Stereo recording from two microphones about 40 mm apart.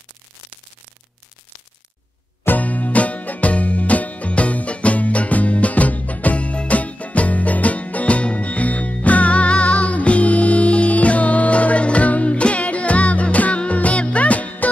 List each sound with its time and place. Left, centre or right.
2.6 s music: left